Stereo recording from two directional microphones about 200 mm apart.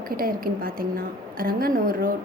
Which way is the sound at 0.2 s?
45° right (ahead or behind).